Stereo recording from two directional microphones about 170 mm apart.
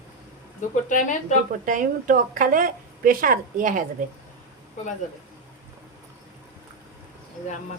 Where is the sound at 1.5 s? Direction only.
50° right (ahead or behind).